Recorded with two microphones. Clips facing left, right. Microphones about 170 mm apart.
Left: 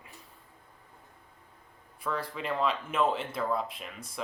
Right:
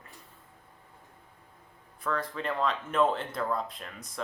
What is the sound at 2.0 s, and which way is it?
Speech, 5° left (ahead or behind).